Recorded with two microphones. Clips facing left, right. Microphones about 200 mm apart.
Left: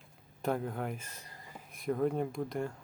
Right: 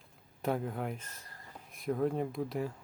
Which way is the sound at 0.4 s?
Centre (ahead or behind).